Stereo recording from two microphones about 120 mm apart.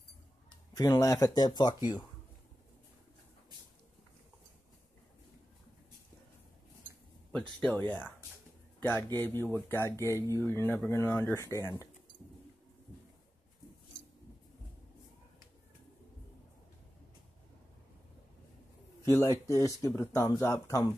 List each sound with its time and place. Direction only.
0.7 s speech: 30° left (ahead or behind)
7.3 s speech: 5° left (ahead or behind)
8.7 s a sound: 15° left (ahead or behind)
9.3 s speech: 20° left (ahead or behind)
19.0 s speech: 25° left (ahead or behind)